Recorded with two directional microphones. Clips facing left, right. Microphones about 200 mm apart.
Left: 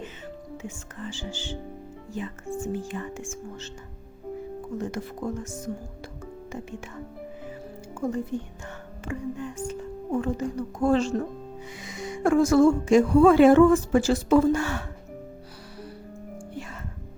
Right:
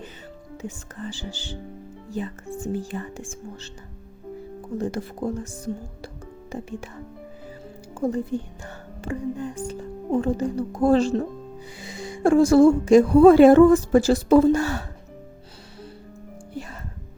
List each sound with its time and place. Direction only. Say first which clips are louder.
0.5 s speech: right 2 dB; 35° right (ahead or behind)
4.8 s speech: right 6 dB; 35° right (ahead or behind)
7.9 s speech: right 4 dB; 35° right (ahead or behind)